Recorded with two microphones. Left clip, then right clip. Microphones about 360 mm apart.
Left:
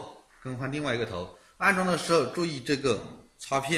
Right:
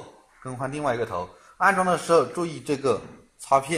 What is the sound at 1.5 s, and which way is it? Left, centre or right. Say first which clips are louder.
A man's voice: right 5 dB; centre.